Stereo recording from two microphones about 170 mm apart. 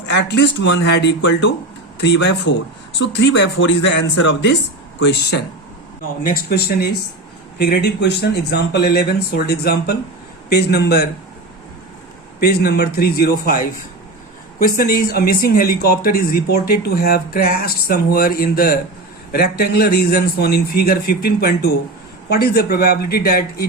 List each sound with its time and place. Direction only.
0.1 s speech: 85° left
6.2 s speech: 60° left (ahead or behind)
12.4 s speech: 65° left (ahead or behind)